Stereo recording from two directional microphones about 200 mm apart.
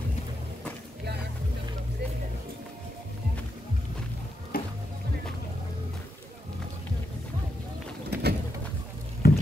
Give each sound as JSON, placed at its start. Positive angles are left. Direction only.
{"t": 4.5, "sound": "music", "side_deg": 45}
{"t": 8.1, "sound": "bird", "side_deg": -55}
{"t": 9.2, "sound": "patter", "side_deg": 50}